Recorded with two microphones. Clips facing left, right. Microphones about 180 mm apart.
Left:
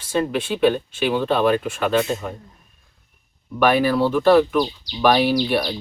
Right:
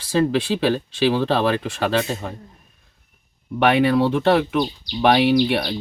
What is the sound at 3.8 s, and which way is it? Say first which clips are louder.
Speech: right 1 dB; 25° right (ahead or behind).